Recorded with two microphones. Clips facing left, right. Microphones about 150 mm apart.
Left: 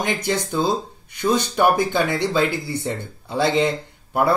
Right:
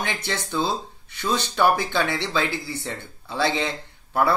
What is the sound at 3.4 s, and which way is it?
Speech, 50° left (ahead or behind).